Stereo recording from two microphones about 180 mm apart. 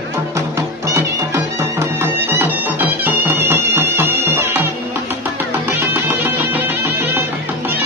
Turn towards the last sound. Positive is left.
turn(degrees=-10)  # may be behind; listen again after turning